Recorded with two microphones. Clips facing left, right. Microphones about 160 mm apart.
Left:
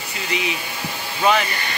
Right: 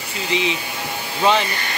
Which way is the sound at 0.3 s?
25° right (ahead or behind).